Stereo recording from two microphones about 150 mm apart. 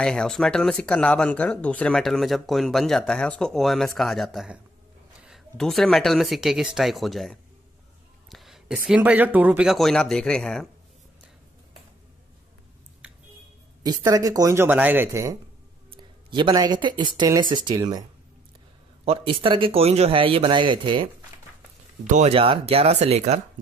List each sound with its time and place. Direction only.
0.0 s speech: 5° left (ahead or behind)
8.3 s a sound: centre (ahead or behind)
8.7 s speech: 5° right (ahead or behind)
13.0 s a sound: 5° right (ahead or behind)
13.8 s speech: 25° right (ahead or behind)
15.9 s speech: 30° right (ahead or behind)
19.0 s speech: 40° right (ahead or behind)
22.0 s speech: 50° right (ahead or behind)